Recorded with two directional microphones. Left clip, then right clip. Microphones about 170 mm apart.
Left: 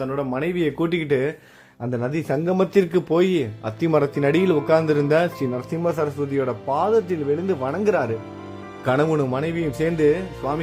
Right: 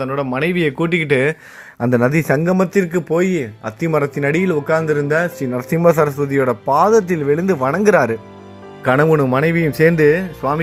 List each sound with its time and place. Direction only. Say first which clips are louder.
0.0 s speech: right 5 dB; 30° right (ahead or behind)
2.6 s speech: right 2 dB; centre (ahead or behind)
5.5 s speech: right 12 dB; 25° right (ahead or behind)